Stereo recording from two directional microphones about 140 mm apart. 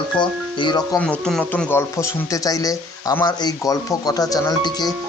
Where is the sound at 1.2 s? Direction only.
5° left (ahead or behind); by 4.9 s 25° left (ahead or behind).